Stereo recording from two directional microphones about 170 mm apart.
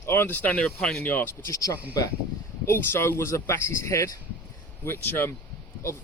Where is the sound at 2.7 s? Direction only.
15° left (ahead or behind).